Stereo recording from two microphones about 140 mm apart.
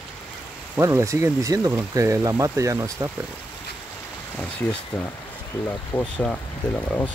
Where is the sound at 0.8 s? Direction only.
20° right (ahead or behind).